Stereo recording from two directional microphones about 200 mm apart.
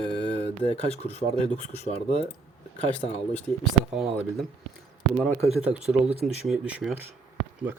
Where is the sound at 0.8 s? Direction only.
30° left (ahead or behind).